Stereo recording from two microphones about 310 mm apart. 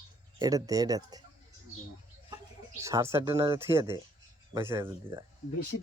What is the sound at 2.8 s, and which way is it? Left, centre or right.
Speech, centre.